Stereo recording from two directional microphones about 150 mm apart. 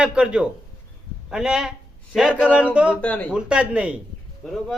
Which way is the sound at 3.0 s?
10° left (ahead or behind).